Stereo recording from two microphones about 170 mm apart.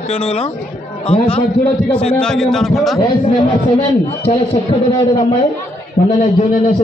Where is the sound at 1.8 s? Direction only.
5° left (ahead or behind).